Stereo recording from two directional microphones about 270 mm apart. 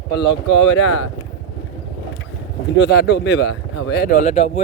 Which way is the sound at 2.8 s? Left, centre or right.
Left.